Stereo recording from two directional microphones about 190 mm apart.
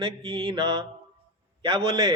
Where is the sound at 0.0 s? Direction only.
30° right (ahead or behind).